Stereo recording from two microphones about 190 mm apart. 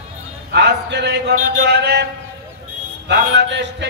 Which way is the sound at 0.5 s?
60° right (ahead or behind).